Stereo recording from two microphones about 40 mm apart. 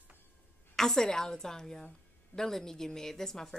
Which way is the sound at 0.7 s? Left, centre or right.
Centre.